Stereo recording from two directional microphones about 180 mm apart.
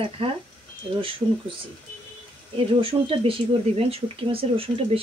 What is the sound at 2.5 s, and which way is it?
Speech, 30° right (ahead or behind).